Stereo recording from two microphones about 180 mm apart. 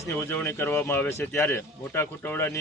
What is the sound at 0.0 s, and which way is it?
A man's voice, 10° left (ahead or behind).